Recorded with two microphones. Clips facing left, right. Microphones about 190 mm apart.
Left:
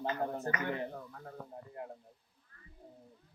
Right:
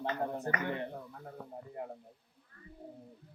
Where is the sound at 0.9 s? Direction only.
10° right (ahead or behind).